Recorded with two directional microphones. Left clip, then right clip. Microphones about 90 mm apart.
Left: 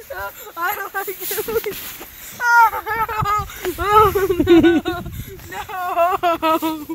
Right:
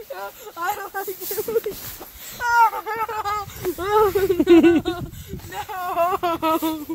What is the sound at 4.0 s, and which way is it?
Speech, 45° right (ahead or behind).